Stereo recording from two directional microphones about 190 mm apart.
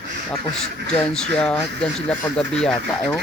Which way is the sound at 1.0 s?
5° left (ahead or behind).